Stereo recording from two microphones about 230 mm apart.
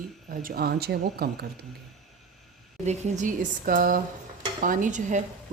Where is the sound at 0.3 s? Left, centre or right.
Right.